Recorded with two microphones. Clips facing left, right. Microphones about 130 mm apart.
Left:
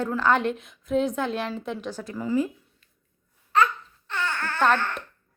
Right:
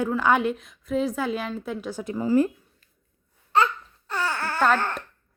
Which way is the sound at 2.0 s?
20° right (ahead or behind).